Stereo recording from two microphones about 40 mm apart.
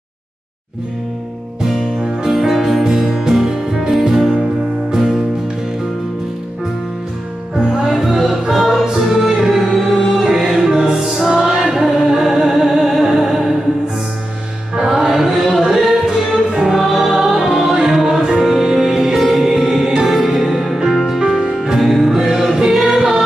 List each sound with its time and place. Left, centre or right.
1.6 s music: centre
7.5 s music: centre
14.8 s music: centre
16.7 s music: centre